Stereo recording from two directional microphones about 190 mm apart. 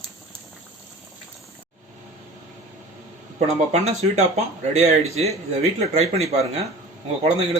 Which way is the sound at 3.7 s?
35° right (ahead or behind).